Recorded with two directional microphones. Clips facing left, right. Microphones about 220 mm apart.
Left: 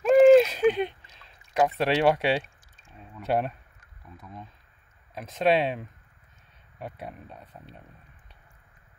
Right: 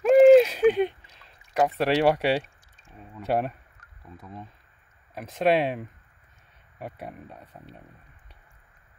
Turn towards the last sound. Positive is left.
turn(degrees=-10)  # may be behind; listen again after turning